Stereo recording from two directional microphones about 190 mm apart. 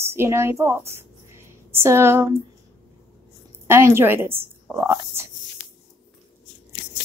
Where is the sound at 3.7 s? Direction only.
15° right (ahead or behind).